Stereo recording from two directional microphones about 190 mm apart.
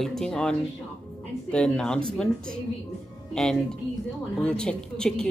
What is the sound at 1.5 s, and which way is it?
Speech, 5° left (ahead or behind).